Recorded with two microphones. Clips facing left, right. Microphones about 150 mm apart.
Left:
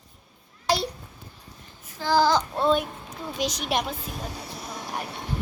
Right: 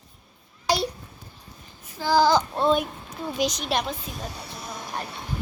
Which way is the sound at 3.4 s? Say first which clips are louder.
Right 1 dB; 5° left (ahead or behind).